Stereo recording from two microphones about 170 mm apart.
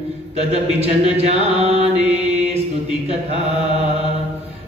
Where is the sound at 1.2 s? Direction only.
40° right (ahead or behind).